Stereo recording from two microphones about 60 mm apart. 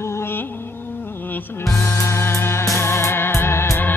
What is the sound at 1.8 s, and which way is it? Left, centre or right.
Music, left.